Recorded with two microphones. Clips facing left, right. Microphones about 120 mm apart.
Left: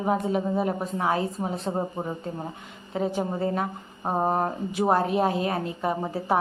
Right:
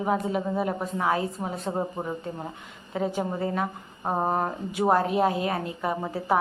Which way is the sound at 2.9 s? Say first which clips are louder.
Left 1 dB; 25° left (ahead or behind).